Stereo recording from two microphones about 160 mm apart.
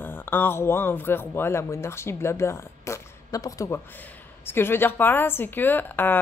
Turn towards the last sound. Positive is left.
turn(degrees=10)  # may be behind; listen again after turning